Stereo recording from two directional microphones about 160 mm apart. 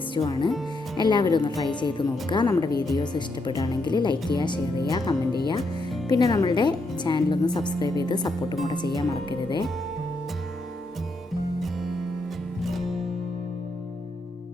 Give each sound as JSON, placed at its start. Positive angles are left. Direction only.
{"t": 0.1, "sound": "a woman's voice", "side_deg": 30}
{"t": 11.6, "sound": "music", "side_deg": 0}